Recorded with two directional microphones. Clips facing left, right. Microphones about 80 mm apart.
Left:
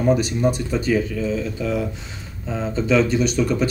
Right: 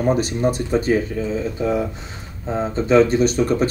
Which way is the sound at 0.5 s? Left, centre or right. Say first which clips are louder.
Right 3 dB; right.